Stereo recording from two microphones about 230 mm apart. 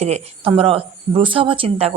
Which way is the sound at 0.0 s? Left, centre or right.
Right.